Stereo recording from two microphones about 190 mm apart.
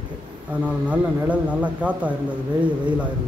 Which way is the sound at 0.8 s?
5° right (ahead or behind).